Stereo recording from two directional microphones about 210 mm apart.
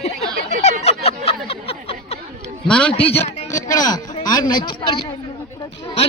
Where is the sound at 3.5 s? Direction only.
15° left (ahead or behind).